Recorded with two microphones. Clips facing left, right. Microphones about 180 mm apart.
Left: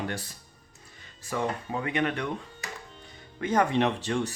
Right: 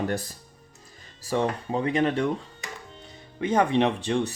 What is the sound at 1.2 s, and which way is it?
Speech, 30° right (ahead or behind).